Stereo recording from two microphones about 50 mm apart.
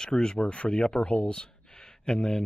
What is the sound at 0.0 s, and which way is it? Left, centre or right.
Speech, centre.